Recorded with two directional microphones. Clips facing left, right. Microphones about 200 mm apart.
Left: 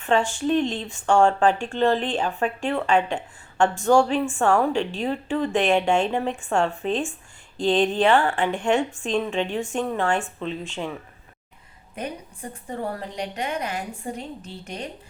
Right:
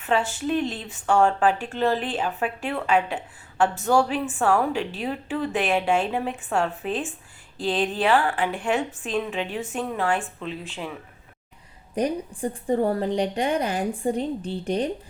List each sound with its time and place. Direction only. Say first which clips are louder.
0.0 s speech: left 2 dB; 5° right (ahead or behind)
11.9 s a woman's voice: right 8 dB; 30° right (ahead or behind)